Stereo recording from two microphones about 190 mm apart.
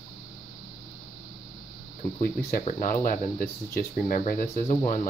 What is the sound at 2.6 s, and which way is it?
Speech, 45° left (ahead or behind).